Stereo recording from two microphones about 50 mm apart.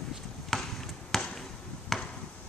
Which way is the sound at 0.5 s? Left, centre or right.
Centre.